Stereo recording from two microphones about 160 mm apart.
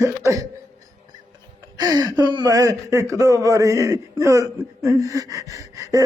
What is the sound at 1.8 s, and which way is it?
Speech, 25° right (ahead or behind).